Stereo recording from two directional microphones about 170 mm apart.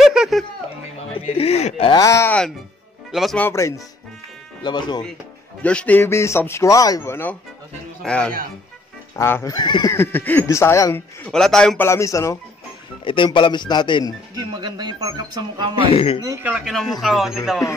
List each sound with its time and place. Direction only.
0.0 s a sound: 5° right (ahead or behind)
1.1 s speech: 35° left (ahead or behind)
1.9 s speech: 20° left (ahead or behind)
3.1 s speech: centre (ahead or behind)
3.3 s speech: 15° left (ahead or behind)
5.6 s speech: 5° left (ahead or behind); by 9.9 s 25° left (ahead or behind)
9.9 s speech: 10° left (ahead or behind)
11.3 s speech: 5° left (ahead or behind)
11.9 s speech: 15° left (ahead or behind)
13.0 s speech: 30° left (ahead or behind)
14.3 s speech: 25° right (ahead or behind)
15.9 s speech: 35° left (ahead or behind)
16.4 s speech: 5° right (ahead or behind)